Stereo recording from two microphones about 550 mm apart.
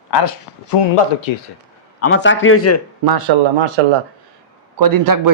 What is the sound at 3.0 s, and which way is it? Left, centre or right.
Speech, right.